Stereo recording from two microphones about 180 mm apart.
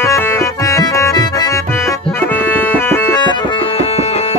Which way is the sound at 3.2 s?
25° left (ahead or behind).